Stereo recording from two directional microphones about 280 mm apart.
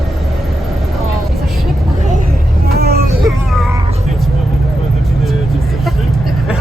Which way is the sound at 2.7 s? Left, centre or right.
Right.